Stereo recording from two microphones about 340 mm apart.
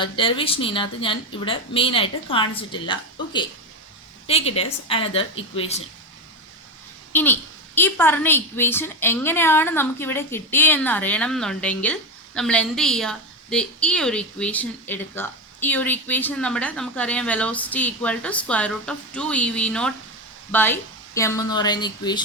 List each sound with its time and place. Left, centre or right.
0.0 s speech: centre
7.1 s a child's voice: centre